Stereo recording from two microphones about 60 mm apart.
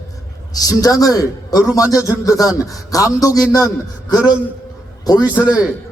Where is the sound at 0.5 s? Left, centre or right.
Left.